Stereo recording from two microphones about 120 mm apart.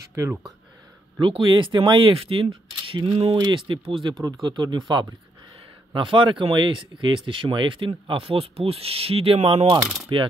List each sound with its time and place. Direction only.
0.1 s speech: 25° right (ahead or behind)
1.2 s speech: 40° right (ahead or behind)
4.2 s speech: 35° right (ahead or behind)